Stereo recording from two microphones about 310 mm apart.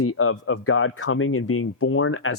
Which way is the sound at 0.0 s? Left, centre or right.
Left.